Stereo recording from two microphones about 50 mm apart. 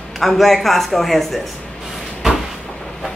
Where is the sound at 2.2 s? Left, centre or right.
Centre.